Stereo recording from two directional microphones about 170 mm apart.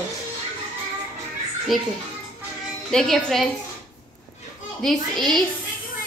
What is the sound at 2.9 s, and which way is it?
Speech, centre (ahead or behind).